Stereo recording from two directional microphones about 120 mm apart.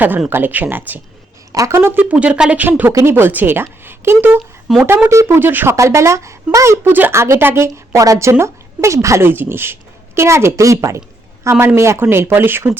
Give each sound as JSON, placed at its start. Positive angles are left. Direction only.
{"t": 0.3, "sound": "speech", "side_deg": -15}
{"t": 4.7, "sound": "speech", "side_deg": 0}
{"t": 5.0, "sound": "speech", "side_deg": -20}